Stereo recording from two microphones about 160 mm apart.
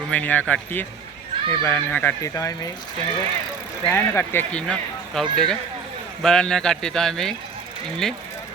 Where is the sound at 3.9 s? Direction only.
15° left (ahead or behind).